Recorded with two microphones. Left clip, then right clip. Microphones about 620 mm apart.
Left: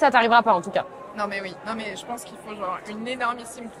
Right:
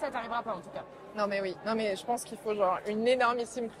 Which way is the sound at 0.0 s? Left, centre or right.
Left.